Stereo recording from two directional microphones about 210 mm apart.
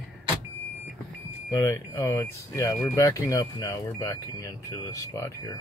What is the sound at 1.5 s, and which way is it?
Speech, 15° left (ahead or behind).